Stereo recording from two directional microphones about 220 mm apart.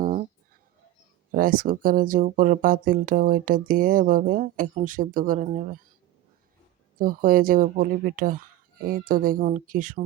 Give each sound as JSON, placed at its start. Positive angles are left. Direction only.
{"t": 0.0, "sound": "a sound", "side_deg": -35}
{"t": 1.3, "sound": "speech", "side_deg": -40}
{"t": 7.0, "sound": "speech", "side_deg": -40}